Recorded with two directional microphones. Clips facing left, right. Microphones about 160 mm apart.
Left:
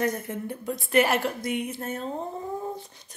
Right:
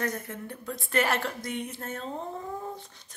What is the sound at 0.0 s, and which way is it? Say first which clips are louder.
A woman's voice: left 5 dB; 15° left (ahead or behind).